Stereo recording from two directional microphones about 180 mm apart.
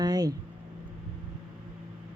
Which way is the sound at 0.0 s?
20° right (ahead or behind).